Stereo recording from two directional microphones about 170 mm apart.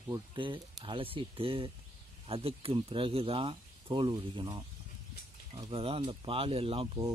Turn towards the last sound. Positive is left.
turn(degrees=-35)  # may be behind; listen again after turning